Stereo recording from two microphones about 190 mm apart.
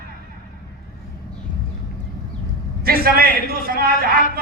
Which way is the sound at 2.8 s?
50° right (ahead or behind).